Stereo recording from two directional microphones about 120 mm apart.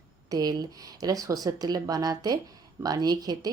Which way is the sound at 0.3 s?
35° right (ahead or behind).